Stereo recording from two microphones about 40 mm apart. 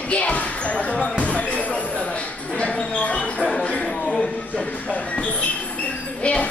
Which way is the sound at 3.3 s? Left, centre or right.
Centre.